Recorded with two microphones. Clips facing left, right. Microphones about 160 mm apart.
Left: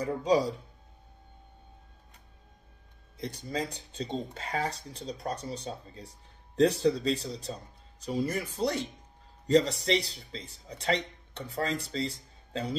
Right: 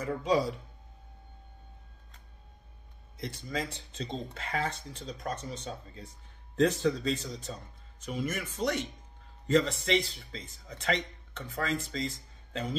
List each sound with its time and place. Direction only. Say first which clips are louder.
0.0 s speech: left 2 dB; 30° left (ahead or behind)
3.2 s speech: left 2 dB; 35° left (ahead or behind)